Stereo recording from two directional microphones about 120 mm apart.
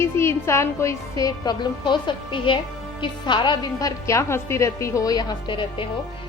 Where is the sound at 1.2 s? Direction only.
40° left (ahead or behind).